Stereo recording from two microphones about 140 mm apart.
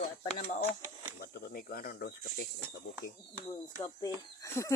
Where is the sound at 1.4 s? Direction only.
90° left.